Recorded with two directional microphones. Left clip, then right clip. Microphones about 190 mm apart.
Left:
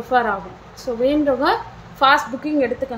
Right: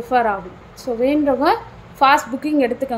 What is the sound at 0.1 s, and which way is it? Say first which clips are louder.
A woman's voice: right 1 dB; 15° right (ahead or behind).